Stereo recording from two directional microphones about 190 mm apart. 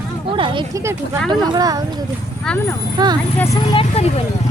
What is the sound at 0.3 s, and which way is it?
Speech, 25° right (ahead or behind).